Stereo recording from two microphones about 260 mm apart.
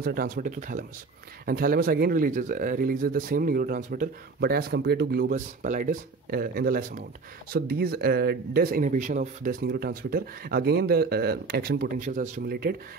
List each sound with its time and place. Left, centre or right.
0.0 s speech: right